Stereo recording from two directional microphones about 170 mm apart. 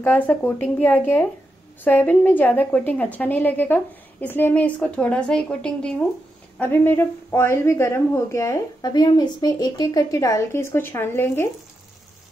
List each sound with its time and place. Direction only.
0.0 s a woman's voice: 10° left (ahead or behind)